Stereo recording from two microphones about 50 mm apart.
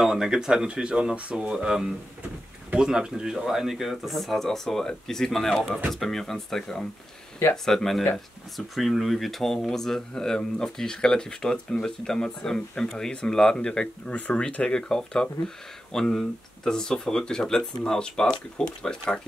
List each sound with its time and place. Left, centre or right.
0.0 s speech: centre
14.1 s speech: left
14.7 s speech: centre